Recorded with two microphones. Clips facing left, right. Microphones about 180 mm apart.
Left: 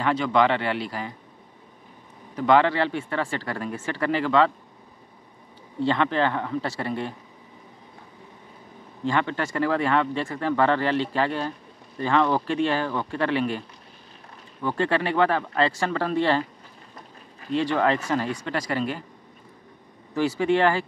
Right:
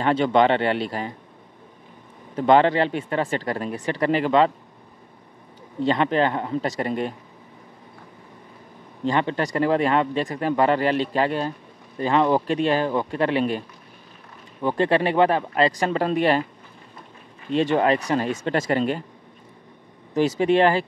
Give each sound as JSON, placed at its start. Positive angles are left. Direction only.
{"t": 0.0, "sound": "speech", "side_deg": -25}
{"t": 2.3, "sound": "speech", "side_deg": -25}
{"t": 5.8, "sound": "speech", "side_deg": -15}
{"t": 9.0, "sound": "speech", "side_deg": -20}
{"t": 14.6, "sound": "speech", "side_deg": -15}
{"t": 17.6, "sound": "speech", "side_deg": -20}
{"t": 20.2, "sound": "speech", "side_deg": -20}